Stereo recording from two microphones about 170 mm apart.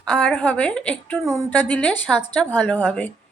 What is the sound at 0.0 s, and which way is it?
A woman's voice, 5° left (ahead or behind).